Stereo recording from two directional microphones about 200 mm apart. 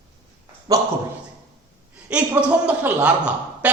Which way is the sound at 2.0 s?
5° right (ahead or behind).